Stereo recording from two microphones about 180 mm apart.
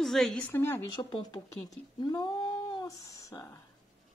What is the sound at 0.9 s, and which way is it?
Speech, 25° left (ahead or behind).